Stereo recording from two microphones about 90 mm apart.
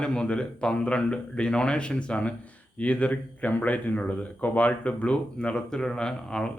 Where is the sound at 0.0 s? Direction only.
10° left (ahead or behind).